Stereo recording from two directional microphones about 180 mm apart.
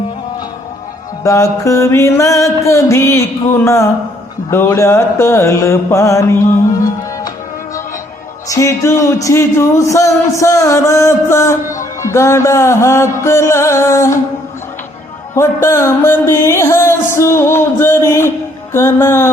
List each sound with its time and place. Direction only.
1.2 s speech: 15° left (ahead or behind)
8.4 s speech: 15° left (ahead or behind)
15.4 s speech: 15° left (ahead or behind)